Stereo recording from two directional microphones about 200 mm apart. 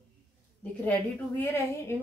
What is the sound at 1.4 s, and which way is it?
Speech, 10° left (ahead or behind).